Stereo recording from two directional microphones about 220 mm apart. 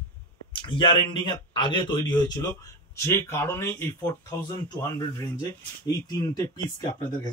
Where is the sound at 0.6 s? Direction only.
20° left (ahead or behind).